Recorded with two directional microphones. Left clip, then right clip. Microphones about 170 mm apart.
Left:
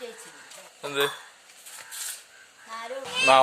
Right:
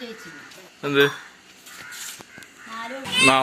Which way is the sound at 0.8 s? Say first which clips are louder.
Right 8 dB; centre (ahead or behind).